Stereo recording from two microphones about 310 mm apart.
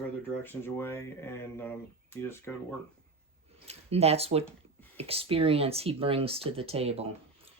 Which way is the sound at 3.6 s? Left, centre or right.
Centre.